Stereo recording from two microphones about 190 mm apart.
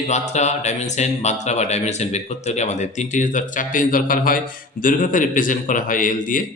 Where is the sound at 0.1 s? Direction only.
35° left (ahead or behind).